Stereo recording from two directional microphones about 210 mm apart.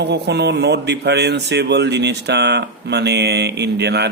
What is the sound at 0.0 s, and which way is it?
Speech, 55° right (ahead or behind).